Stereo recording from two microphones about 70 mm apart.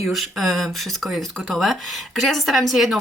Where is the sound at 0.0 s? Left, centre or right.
Centre.